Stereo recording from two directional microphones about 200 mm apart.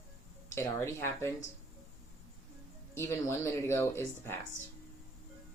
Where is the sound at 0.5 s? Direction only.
15° left (ahead or behind).